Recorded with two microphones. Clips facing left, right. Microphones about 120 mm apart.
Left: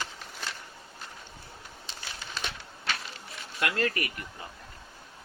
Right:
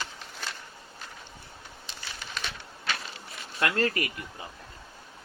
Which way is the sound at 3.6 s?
35° right (ahead or behind).